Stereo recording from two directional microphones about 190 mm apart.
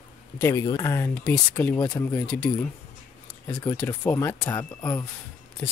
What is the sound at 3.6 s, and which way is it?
Speech, 10° left (ahead or behind).